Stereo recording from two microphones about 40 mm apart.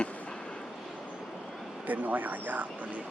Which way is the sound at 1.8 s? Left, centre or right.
Right.